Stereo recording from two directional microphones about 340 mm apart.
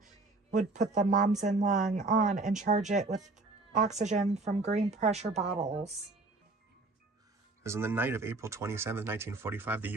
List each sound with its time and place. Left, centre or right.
0.0 s a sound: right
1.4 s speech: right
7.6 s speech: centre